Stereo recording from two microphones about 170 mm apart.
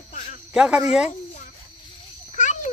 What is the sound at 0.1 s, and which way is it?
Cricket, 50° left (ahead or behind).